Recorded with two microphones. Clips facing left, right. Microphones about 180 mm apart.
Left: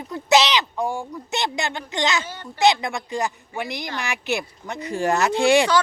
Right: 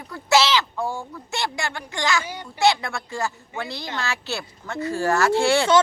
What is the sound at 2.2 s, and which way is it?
Speech, 10° right (ahead or behind).